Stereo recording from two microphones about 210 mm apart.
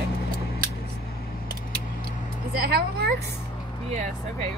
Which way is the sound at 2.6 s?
50° right (ahead or behind).